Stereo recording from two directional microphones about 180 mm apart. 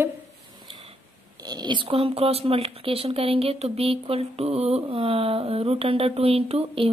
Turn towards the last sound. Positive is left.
turn(degrees=-35)  # may be behind; listen again after turning